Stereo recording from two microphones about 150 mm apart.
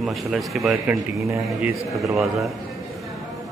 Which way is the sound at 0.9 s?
10° right (ahead or behind).